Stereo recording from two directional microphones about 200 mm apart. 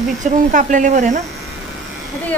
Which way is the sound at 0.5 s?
40° right (ahead or behind).